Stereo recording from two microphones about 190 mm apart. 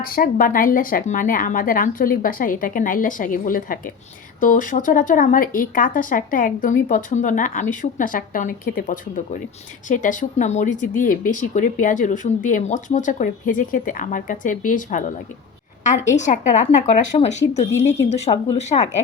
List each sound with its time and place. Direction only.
0.0 s speech: 50° left (ahead or behind)